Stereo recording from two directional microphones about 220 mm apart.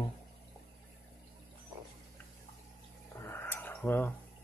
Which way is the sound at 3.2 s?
10° left (ahead or behind).